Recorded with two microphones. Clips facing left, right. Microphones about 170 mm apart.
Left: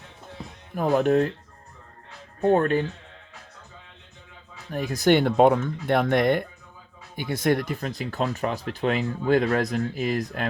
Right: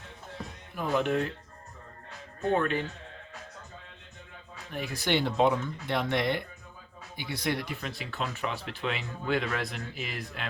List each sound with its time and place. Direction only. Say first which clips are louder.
0.8 s speech: left 7 dB; 45° left (ahead or behind)
2.4 s speech: left 7 dB; 40° left (ahead or behind)
4.7 s speech: left 9 dB; 40° left (ahead or behind)